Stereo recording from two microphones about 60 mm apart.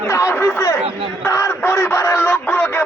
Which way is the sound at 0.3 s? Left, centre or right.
Left.